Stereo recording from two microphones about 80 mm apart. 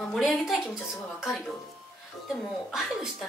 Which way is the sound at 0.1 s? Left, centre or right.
Centre.